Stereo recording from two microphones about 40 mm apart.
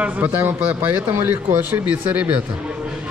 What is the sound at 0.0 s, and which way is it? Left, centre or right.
A man's voice, right.